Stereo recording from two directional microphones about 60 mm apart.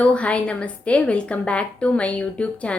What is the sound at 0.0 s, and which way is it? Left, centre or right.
A woman's voice, left.